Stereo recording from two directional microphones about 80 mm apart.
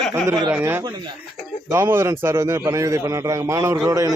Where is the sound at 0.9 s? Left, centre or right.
Right.